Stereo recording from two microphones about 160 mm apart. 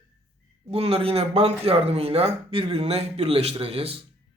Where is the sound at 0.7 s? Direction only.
40° right (ahead or behind).